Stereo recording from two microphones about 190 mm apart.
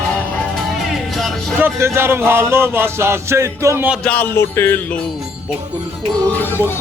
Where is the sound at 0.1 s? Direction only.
5° left (ahead or behind).